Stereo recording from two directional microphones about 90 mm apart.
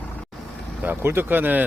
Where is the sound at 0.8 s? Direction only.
25° right (ahead or behind).